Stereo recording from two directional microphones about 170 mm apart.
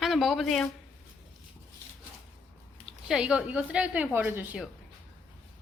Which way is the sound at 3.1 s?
5° right (ahead or behind).